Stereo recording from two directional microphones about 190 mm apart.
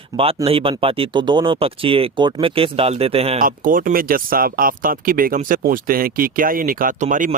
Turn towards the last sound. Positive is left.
turn(degrees=-40)  # may be behind; listen again after turning